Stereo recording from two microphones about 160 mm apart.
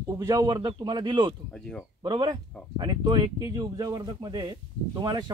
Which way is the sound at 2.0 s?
30° right (ahead or behind).